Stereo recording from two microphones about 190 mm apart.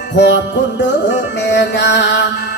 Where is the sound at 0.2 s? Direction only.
70° left (ahead or behind).